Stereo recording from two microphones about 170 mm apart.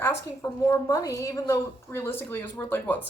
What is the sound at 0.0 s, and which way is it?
Speech, 15° left (ahead or behind).